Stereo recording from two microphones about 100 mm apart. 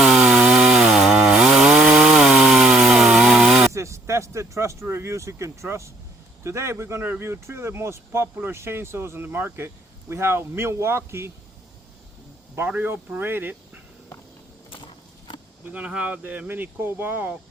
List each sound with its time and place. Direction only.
0.0 s chainsaw: 5° right (ahead or behind)
3.7 s speech: 30° right (ahead or behind)
12.5 s speech: 20° right (ahead or behind)
15.6 s speech: 10° right (ahead or behind)